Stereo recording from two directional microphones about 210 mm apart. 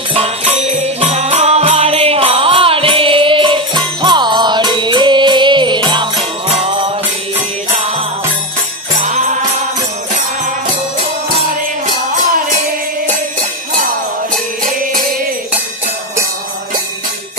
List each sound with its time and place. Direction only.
0.6 s music: 30° right (ahead or behind)
9.0 s music: 35° right (ahead or behind)